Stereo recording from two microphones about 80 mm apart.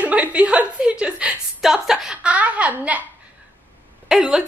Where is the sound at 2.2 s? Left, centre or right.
Centre.